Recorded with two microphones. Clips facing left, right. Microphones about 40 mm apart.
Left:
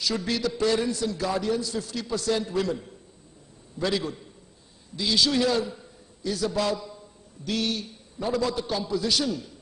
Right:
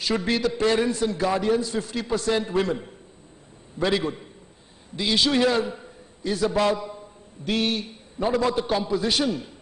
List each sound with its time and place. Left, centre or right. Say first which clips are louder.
0.0 s a man's voice: right 4 dB; right